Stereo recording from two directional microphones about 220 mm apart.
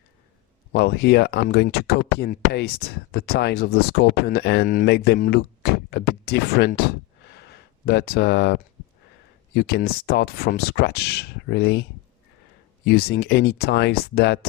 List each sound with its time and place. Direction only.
0.7 s speech: 50° left (ahead or behind)
7.3 s a sound: 50° left (ahead or behind)
9.6 s speech: 45° left (ahead or behind)